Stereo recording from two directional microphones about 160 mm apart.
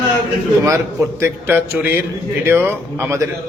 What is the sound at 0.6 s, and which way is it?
Speech, 20° right (ahead or behind).